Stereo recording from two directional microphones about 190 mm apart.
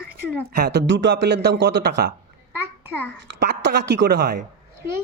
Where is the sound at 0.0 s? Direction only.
55° right (ahead or behind).